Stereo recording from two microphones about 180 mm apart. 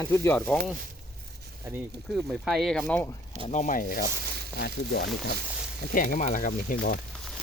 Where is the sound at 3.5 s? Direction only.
45° left (ahead or behind).